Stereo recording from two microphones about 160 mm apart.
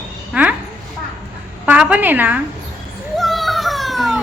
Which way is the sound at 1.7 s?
10° right (ahead or behind).